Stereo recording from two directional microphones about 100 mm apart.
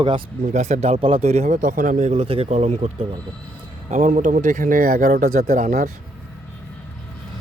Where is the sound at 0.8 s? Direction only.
80° right.